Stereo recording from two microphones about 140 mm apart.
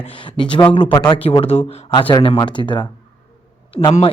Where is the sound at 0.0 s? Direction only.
35° left (ahead or behind).